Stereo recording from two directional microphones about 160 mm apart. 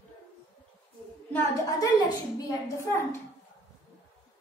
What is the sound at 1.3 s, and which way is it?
A woman's voice, 20° left (ahead or behind).